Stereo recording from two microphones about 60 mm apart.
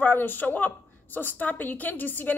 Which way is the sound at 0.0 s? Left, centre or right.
Left.